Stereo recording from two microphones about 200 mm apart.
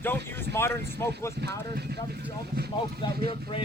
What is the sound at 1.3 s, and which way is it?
Speech, 55° right (ahead or behind).